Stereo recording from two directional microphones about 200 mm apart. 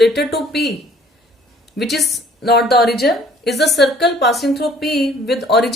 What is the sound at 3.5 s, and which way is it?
Speech, 55° left (ahead or behind).